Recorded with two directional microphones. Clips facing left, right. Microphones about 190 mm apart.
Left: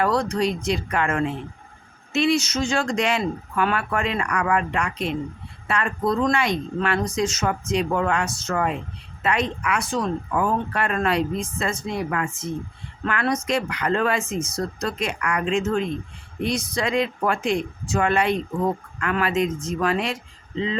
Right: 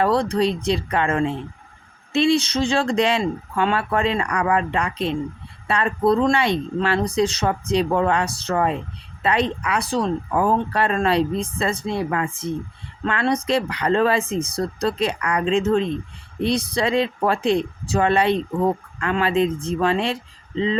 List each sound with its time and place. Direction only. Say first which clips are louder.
0.0 s speech: right 3 dB; 30° right (ahead or behind)